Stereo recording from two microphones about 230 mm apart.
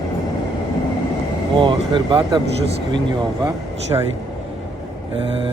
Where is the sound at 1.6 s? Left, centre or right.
Right.